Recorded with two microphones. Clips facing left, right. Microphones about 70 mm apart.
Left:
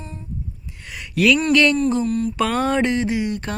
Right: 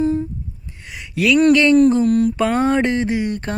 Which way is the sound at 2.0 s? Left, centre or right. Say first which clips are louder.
Right 6 dB; right.